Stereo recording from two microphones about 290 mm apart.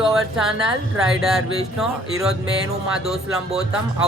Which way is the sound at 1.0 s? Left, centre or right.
Centre.